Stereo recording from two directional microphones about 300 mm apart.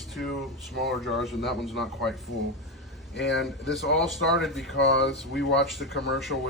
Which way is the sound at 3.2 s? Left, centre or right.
Left.